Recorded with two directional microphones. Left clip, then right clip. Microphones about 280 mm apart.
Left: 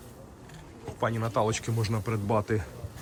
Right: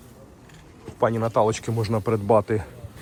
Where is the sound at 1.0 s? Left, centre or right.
Centre.